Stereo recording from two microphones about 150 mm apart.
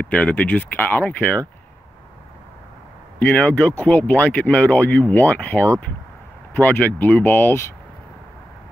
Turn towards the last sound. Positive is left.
turn(degrees=15)  # may be behind; listen again after turning